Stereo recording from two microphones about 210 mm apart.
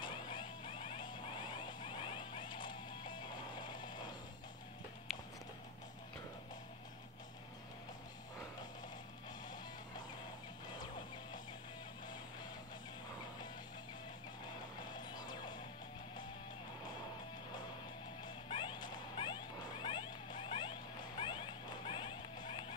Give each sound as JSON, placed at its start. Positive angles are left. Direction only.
{"t": 0.0, "sound": "music", "side_deg": 20}
{"t": 14.9, "sound": "music", "side_deg": 20}
{"t": 18.2, "sound": "music", "side_deg": 20}
{"t": 21.2, "sound": "a sound", "side_deg": 25}